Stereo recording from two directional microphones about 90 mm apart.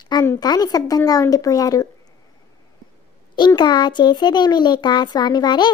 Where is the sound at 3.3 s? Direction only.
55° left (ahead or behind).